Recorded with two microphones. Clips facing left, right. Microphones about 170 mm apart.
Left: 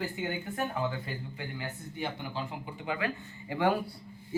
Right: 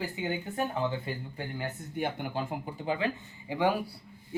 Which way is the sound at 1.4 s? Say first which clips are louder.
Right 3 dB; 40° right (ahead or behind).